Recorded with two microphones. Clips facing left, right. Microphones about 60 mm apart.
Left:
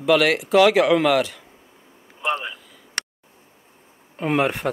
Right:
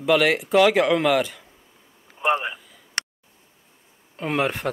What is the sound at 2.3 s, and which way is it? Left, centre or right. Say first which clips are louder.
Speech: right 3 dB; centre.